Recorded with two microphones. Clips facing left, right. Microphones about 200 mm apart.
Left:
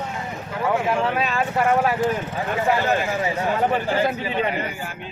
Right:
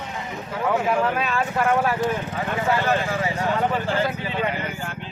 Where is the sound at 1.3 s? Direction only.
15° left (ahead or behind).